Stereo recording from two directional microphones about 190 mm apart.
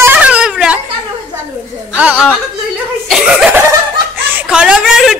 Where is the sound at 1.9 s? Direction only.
5° right (ahead or behind).